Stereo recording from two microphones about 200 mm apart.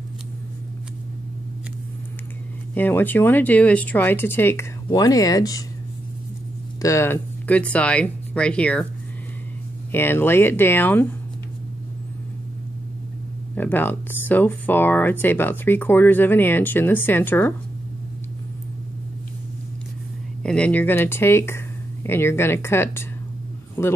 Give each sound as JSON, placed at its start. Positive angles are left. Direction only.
{"t": 2.7, "sound": "speech", "side_deg": 10}
{"t": 6.8, "sound": "speech", "side_deg": 15}
{"t": 9.9, "sound": "speech", "side_deg": 10}
{"t": 13.6, "sound": "speech", "side_deg": 10}
{"t": 20.4, "sound": "a man's voice", "side_deg": 5}